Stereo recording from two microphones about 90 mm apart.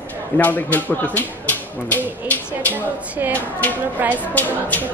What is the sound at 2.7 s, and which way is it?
Speech, 20° right (ahead or behind).